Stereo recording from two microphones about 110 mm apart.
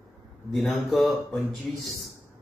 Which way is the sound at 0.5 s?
20° left (ahead or behind).